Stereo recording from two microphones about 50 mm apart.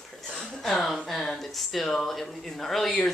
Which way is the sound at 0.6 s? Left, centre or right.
Centre.